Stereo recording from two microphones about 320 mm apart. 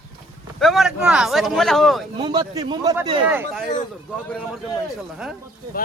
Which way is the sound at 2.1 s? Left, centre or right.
Centre.